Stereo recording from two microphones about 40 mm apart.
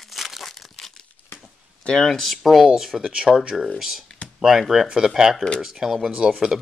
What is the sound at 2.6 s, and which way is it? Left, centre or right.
Speech, centre.